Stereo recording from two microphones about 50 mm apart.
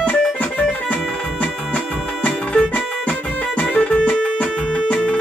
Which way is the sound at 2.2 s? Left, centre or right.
Left.